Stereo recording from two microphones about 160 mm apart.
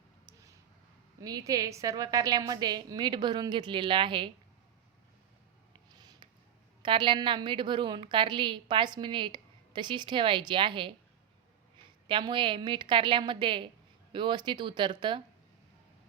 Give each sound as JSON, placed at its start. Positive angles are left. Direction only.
{"t": 1.2, "sound": "a woman's voice", "side_deg": -25}
{"t": 6.0, "sound": "a sound", "side_deg": -25}
{"t": 6.8, "sound": "a woman's voice", "side_deg": -30}
{"t": 12.0, "sound": "a woman's voice", "side_deg": -30}